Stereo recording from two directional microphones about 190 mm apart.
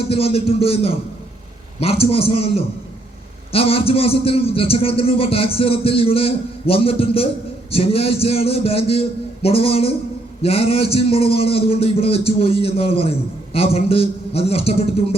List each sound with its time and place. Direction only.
0.1 s a man's voice: 30° left (ahead or behind)